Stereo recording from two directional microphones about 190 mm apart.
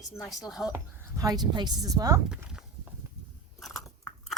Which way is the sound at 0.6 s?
15° left (ahead or behind).